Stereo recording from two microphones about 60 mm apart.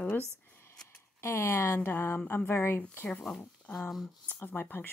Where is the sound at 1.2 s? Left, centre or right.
Left.